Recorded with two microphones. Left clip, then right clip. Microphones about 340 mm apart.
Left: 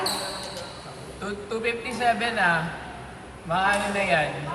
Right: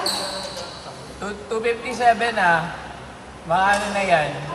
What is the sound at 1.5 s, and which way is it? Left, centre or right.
Speech, centre.